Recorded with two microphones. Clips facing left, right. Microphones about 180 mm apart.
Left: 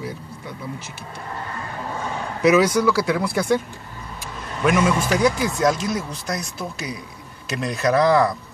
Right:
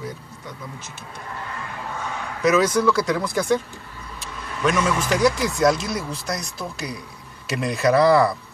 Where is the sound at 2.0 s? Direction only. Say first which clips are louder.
Left 3 dB; 30° left (ahead or behind).